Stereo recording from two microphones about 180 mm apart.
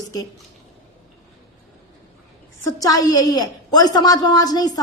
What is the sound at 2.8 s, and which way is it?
A woman's voice, 20° left (ahead or behind).